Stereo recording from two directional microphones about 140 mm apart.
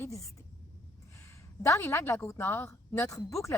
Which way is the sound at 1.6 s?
20° left (ahead or behind).